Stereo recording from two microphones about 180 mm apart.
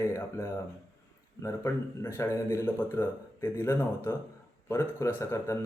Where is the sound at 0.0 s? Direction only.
15° left (ahead or behind).